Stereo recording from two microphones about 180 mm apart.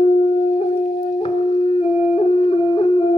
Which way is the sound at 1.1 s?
30° left (ahead or behind).